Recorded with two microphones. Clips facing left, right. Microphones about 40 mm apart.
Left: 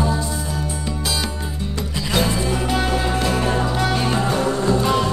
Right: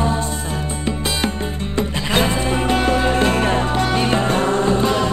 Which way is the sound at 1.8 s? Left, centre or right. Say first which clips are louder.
Right 3 dB; right.